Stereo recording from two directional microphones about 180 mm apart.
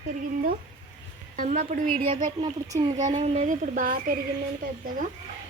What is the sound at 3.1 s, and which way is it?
A woman's voice, 40° right (ahead or behind).